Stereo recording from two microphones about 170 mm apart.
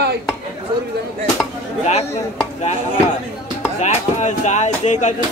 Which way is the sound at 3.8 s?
45° left (ahead or behind).